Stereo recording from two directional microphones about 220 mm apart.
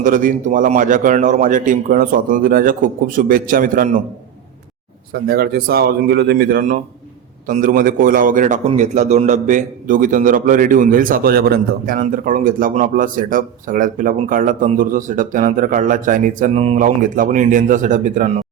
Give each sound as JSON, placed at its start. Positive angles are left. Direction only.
{"t": 0.0, "sound": "a man's voice", "side_deg": -35}
{"t": 5.1, "sound": "a man's voice", "side_deg": -45}